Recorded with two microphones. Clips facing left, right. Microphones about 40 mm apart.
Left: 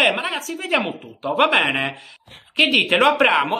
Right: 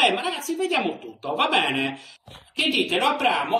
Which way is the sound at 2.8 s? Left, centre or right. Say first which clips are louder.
Left 4 dB; left.